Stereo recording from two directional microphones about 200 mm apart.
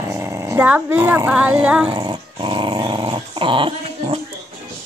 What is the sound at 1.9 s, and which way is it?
Dog, 20° right (ahead or behind).